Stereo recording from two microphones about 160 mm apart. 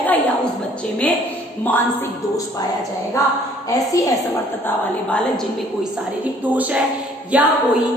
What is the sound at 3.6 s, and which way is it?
Speech, 20° left (ahead or behind).